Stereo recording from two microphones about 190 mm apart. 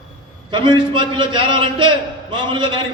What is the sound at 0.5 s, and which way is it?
A man's voice, 25° right (ahead or behind).